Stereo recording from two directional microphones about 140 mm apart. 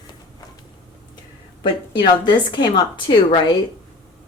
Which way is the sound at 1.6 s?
30° left (ahead or behind).